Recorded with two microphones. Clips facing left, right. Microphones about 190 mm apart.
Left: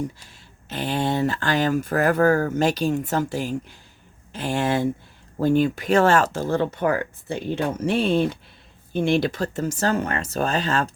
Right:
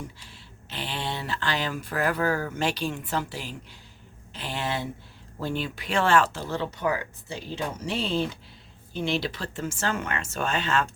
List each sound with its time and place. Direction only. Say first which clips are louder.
0.7 s speech: left 9 dB; 45° left (ahead or behind)